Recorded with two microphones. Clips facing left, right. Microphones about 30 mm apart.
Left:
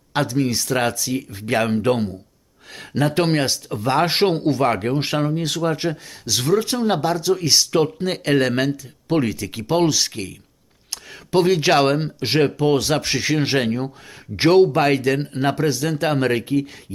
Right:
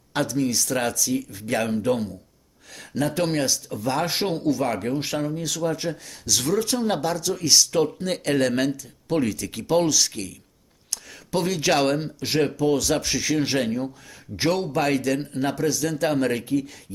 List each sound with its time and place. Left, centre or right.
0.1 s speech: left